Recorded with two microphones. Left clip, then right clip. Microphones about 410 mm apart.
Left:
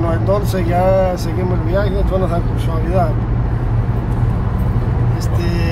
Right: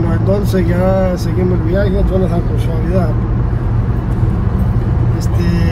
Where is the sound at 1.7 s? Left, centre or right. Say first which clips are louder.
Right 2 dB; left.